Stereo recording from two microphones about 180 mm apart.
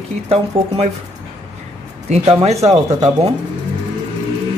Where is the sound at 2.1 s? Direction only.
35° right (ahead or behind).